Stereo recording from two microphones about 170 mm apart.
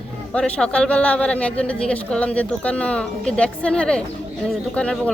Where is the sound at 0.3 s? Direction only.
5° left (ahead or behind).